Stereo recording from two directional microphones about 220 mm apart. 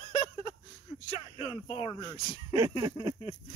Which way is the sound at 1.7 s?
25° left (ahead or behind).